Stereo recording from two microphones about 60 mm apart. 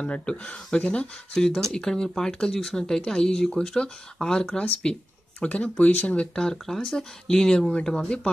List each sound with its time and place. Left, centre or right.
0.0 s speech: centre